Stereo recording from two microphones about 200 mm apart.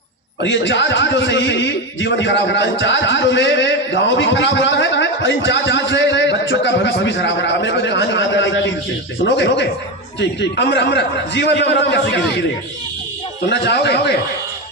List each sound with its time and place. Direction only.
0.4 s a man's voice: 65° left (ahead or behind)
13.5 s a man's voice: 60° left (ahead or behind)